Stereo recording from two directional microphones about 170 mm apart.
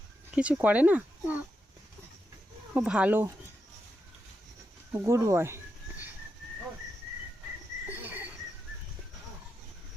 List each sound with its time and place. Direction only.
0.3 s speech: 5° right (ahead or behind)
2.7 s speech: 5° right (ahead or behind)
5.0 s speech: 15° right (ahead or behind)
7.9 s cricket: 10° right (ahead or behind)